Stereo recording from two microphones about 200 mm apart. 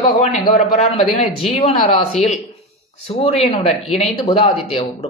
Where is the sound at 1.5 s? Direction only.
25° left (ahead or behind).